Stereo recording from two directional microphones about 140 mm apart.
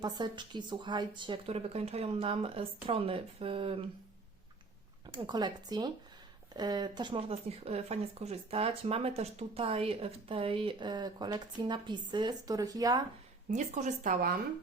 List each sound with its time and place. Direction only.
0.0 s speech: 30° right (ahead or behind)
5.0 s speech: 30° right (ahead or behind)
13.5 s speech: 55° right (ahead or behind)